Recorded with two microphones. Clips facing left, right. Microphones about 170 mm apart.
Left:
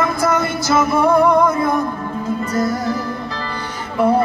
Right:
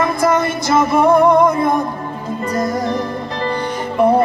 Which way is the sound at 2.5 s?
45° right (ahead or behind).